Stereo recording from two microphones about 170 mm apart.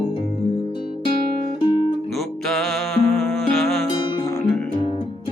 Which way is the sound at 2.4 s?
Centre (ahead or behind).